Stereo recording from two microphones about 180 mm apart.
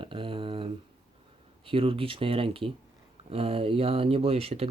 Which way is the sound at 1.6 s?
30° right (ahead or behind).